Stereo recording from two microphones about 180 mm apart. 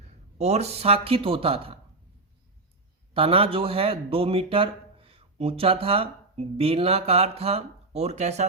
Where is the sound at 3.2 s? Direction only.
30° right (ahead or behind).